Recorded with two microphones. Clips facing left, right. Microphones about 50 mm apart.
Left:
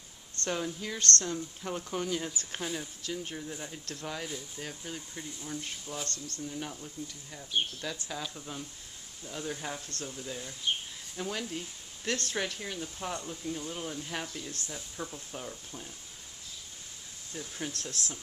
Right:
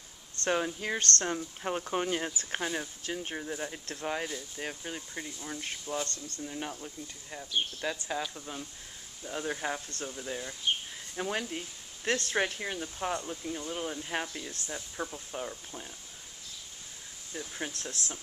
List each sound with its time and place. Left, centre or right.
0.5 s speech: right
8.2 s speech: centre
9.2 s speech: right
11.5 s a sound: right
12.3 s speech: right
17.3 s speech: centre